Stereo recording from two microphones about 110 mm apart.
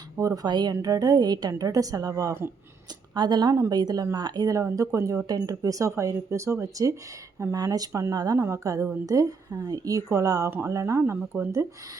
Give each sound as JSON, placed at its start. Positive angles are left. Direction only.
{"t": 0.2, "sound": "speech", "side_deg": -30}
{"t": 3.2, "sound": "speech", "side_deg": -40}